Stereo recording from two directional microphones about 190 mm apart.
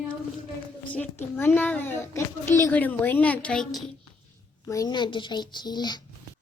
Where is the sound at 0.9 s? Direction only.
10° left (ahead or behind).